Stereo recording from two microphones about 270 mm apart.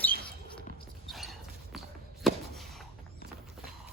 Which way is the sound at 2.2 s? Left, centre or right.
Centre.